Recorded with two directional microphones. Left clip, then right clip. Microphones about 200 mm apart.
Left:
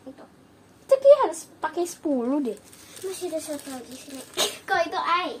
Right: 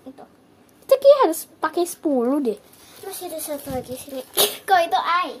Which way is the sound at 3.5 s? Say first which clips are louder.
Right 7 dB; 60° right (ahead or behind).